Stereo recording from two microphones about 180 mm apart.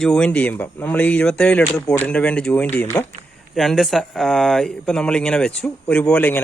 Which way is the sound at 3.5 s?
Centre (ahead or behind).